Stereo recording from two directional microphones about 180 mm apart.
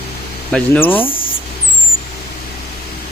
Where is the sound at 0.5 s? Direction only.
10° left (ahead or behind).